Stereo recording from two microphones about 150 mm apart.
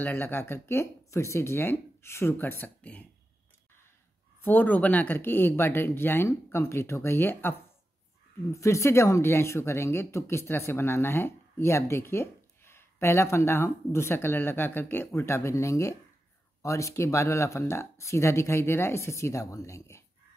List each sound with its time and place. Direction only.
0.0 s speech: 15° left (ahead or behind)
4.4 s speech: 10° left (ahead or behind)